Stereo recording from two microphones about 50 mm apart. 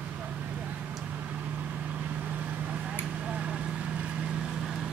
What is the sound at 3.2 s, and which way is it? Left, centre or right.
Vehicle, centre.